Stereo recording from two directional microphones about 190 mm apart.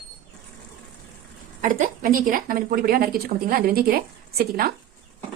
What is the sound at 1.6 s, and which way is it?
A woman's voice, 45° right (ahead or behind).